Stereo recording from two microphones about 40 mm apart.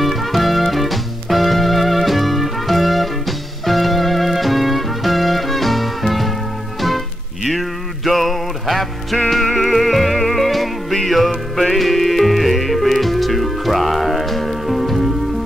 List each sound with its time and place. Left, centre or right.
0.0 s music: centre
7.4 s music: centre